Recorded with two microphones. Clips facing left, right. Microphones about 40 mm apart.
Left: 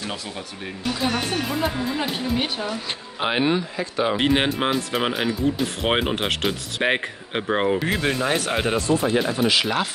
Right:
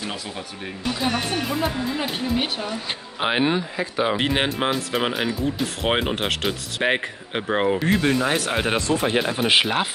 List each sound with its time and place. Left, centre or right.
0.8 s speech: centre
8.7 s speech: right
9.5 s speech: right